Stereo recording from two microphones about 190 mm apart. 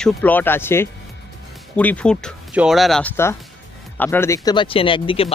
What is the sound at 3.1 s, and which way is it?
Speech, 15° left (ahead or behind).